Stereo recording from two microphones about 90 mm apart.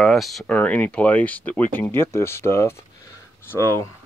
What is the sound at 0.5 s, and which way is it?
Speech, 15° left (ahead or behind).